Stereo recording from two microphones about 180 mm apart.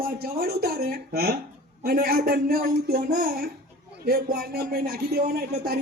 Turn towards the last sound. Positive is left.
turn(degrees=-55)  # may be behind; listen again after turning